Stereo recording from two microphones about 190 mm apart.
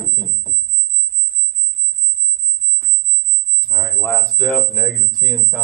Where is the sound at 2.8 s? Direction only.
10° left (ahead or behind).